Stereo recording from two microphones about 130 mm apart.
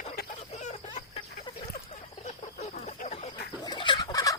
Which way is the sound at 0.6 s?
55° left (ahead or behind).